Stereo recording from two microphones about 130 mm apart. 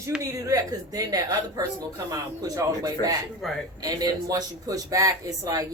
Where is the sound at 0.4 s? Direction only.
25° right (ahead or behind).